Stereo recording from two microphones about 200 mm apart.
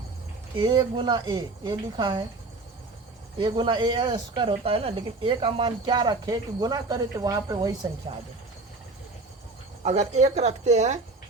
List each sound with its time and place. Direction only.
0.6 s speech: 20° right (ahead or behind)
3.3 s speech: 25° right (ahead or behind)
9.8 s speech: 35° right (ahead or behind)